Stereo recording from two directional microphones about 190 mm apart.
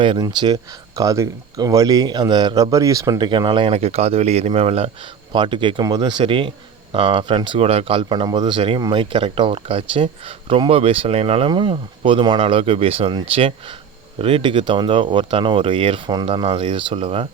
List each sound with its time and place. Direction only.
0.0 s speech: 25° right (ahead or behind)